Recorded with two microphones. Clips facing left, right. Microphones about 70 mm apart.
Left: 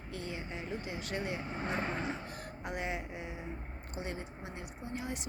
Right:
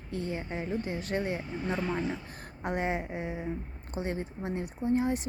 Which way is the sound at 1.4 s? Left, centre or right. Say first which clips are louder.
Right 3 dB; left.